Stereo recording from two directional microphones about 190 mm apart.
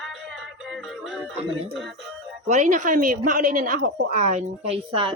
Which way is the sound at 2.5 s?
40° right (ahead or behind).